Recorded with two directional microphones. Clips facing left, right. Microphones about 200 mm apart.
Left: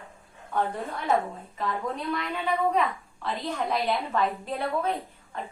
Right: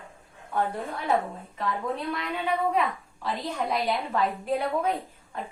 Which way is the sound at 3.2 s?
10° right (ahead or behind).